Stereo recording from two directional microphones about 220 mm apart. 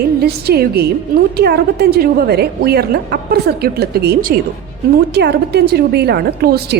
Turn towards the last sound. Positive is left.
turn(degrees=-45)  # may be behind; listen again after turning